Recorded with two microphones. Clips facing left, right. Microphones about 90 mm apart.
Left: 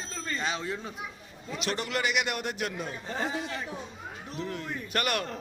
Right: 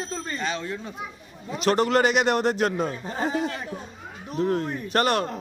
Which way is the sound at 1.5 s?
40° right (ahead or behind).